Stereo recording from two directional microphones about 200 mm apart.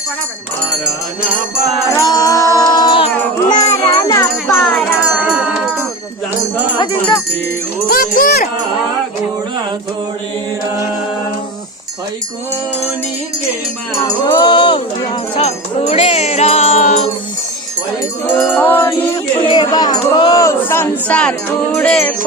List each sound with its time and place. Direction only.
2.0 s music: 15° left (ahead or behind)
4.4 s music: centre (ahead or behind)
7.9 s wind chime: 45° left (ahead or behind)
14.3 s music: 20° left (ahead or behind)
18.3 s music: 5° left (ahead or behind)
19.4 s music: 20° left (ahead or behind); by 22.1 s 5° left (ahead or behind)